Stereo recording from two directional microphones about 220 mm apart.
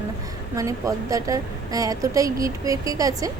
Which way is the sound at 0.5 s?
15° right (ahead or behind).